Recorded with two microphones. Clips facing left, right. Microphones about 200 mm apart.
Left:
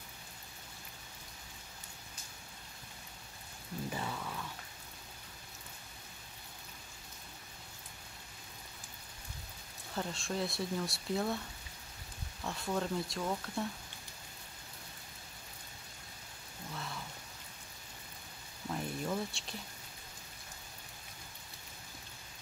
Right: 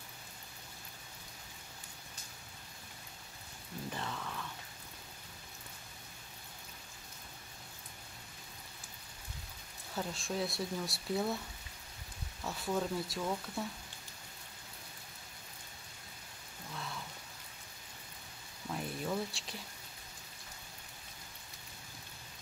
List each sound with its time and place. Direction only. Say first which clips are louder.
3.9 s rain: even; 10° left (ahead or behind)
9.9 s speech: even; centre (ahead or behind)
12.4 s speech: even; 5° right (ahead or behind)
16.7 s rain: even; centre (ahead or behind)
18.7 s a sound: left 1 dB; centre (ahead or behind)